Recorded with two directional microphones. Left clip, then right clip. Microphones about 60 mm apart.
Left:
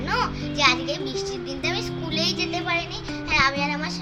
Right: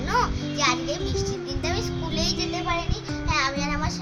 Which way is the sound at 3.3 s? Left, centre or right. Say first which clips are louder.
Left 4 dB; right.